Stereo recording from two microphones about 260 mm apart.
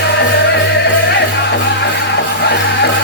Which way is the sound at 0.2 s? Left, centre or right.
Left.